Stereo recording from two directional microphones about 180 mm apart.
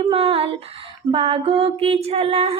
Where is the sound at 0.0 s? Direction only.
30° right (ahead or behind).